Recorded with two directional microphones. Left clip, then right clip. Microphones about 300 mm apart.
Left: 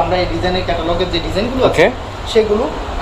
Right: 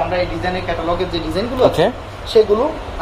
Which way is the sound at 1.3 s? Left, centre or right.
Right.